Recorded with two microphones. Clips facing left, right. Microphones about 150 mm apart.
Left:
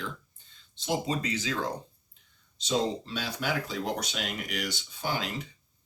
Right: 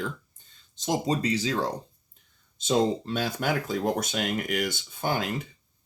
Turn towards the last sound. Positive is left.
turn(degrees=-50)  # may be behind; listen again after turning